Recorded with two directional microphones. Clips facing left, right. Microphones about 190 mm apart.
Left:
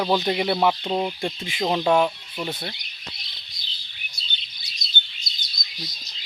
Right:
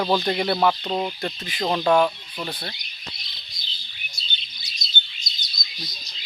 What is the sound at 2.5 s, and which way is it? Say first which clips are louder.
Speech: left 2 dB; 25° left (ahead or behind).